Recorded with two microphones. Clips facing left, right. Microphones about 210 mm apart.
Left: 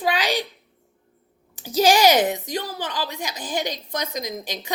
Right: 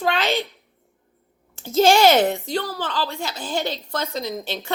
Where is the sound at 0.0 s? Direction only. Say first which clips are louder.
Right 1 dB; 15° left (ahead or behind).